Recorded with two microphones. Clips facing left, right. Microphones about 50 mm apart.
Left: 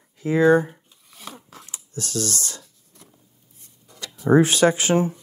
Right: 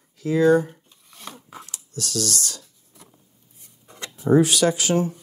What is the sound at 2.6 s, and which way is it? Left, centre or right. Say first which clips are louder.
Writing: even; centre.